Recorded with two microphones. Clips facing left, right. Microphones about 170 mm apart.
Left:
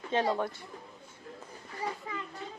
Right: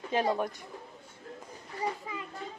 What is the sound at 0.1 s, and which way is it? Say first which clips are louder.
Speech: even; 15° right (ahead or behind).